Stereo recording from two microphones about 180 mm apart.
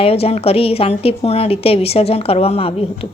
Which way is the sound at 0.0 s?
35° left (ahead or behind).